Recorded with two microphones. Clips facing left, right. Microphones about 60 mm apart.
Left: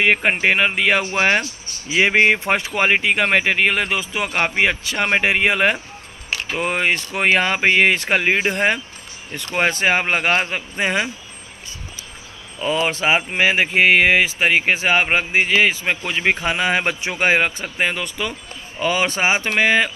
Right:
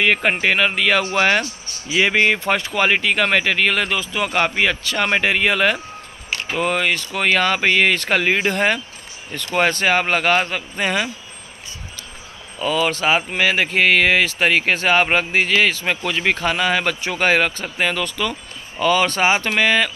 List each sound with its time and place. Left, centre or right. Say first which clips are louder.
0.0 s speech: left 1 dB; centre
12.6 s speech: even; left